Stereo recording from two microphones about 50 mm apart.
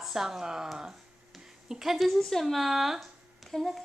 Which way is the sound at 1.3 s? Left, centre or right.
Centre.